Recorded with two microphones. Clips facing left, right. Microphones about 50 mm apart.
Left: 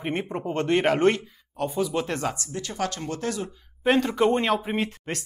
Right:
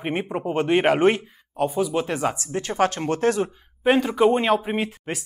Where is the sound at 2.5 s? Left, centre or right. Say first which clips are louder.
Right 7 dB; right.